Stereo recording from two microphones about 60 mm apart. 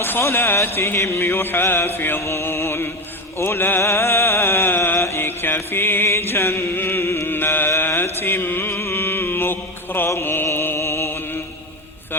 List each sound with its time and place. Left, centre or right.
0.0 s music: left
3.3 s a sound: left
7.8 s mantra: left